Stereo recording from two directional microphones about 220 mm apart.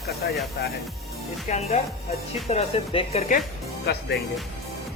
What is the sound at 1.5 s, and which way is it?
Speech, 30° left (ahead or behind).